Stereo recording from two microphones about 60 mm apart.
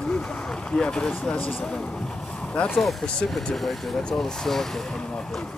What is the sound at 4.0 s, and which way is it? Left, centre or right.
Speech, centre.